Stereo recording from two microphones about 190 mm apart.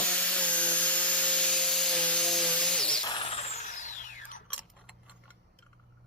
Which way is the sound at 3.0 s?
25° left (ahead or behind).